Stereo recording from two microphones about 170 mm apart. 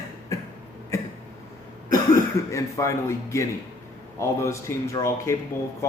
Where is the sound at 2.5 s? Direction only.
20° left (ahead or behind).